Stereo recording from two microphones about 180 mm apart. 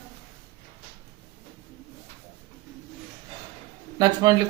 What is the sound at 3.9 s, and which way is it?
Speech, 20° right (ahead or behind).